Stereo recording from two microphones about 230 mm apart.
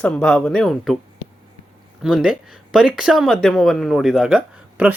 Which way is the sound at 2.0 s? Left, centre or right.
Centre.